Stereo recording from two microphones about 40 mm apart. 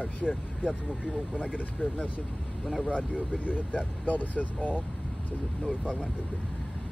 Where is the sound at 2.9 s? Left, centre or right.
Right.